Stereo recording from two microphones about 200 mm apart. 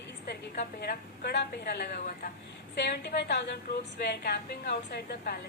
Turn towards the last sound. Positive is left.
turn(degrees=50)  # may be behind; listen again after turning